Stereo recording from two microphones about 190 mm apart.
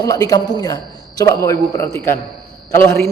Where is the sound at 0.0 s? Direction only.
20° left (ahead or behind).